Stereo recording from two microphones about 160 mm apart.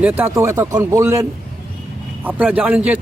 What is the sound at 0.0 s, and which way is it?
Speech, 10° right (ahead or behind).